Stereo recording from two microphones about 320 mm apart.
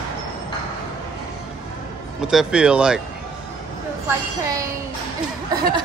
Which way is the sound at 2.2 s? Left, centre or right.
Centre.